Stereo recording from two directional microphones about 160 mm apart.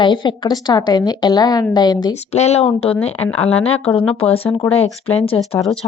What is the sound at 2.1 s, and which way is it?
Speech, 45° left (ahead or behind).